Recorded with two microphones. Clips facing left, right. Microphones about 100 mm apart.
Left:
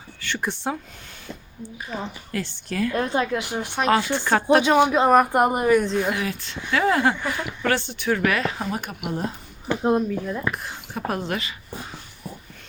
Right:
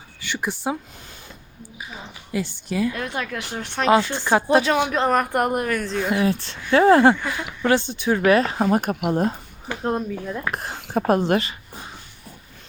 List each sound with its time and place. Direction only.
0.2 s speech: 5° right (ahead or behind)
1.9 s speech: 10° right (ahead or behind)
2.9 s a woman's voice: 30° left (ahead or behind); by 3.8 s 15° left (ahead or behind)
4.1 s speech: 15° right (ahead or behind)
4.6 s a woman's voice: 15° left (ahead or behind)
6.1 s speech: 30° right (ahead or behind)
7.3 s speech: 15° right (ahead or behind); by 9.2 s 50° right (ahead or behind)
10.1 s speech: centre (ahead or behind)
10.5 s speech: 40° right (ahead or behind)